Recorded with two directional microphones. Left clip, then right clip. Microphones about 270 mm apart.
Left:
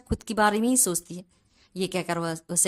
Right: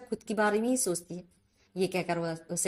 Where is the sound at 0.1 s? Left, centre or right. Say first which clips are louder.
Left 5 dB; centre.